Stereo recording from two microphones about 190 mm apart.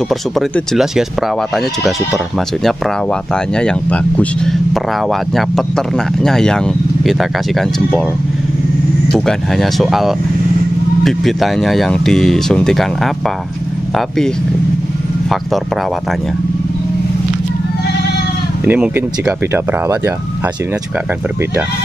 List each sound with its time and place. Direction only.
0.1 s speech: centre (ahead or behind)
2.6 s speech: 5° left (ahead or behind)
9.1 s speech: centre (ahead or behind)
18.7 s speech: 10° right (ahead or behind)